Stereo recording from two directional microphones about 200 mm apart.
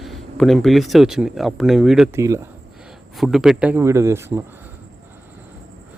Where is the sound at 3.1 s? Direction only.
Centre (ahead or behind).